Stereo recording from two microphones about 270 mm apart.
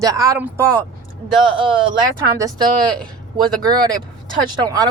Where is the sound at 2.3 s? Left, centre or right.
Centre.